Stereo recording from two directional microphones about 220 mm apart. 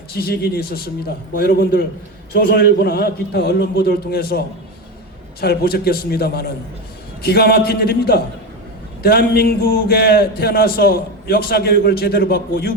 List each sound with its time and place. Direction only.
0.2 s a man's voice: 45° left (ahead or behind)